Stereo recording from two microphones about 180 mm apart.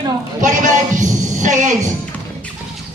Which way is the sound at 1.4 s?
45° right (ahead or behind).